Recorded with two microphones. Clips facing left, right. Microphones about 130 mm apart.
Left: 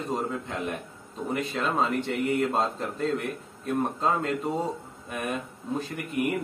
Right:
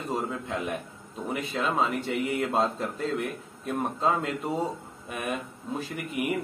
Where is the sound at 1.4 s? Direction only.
Centre (ahead or behind).